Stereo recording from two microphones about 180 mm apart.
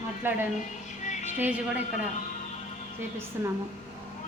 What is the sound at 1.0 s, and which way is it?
Music, 40° left (ahead or behind).